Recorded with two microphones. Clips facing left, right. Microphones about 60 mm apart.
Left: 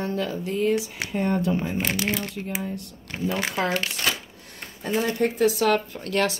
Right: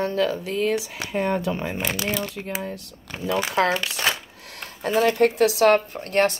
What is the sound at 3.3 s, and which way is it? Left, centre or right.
Speech, right.